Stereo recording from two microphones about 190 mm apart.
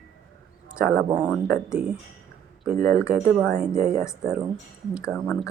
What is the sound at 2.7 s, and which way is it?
Speech, 45° right (ahead or behind).